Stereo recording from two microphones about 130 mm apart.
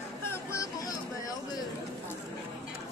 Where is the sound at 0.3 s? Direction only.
25° left (ahead or behind).